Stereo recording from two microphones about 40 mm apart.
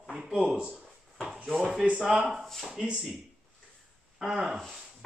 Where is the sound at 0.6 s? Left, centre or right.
Right.